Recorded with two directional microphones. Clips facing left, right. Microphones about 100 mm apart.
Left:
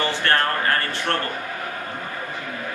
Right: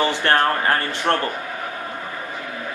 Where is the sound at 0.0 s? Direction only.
20° right (ahead or behind).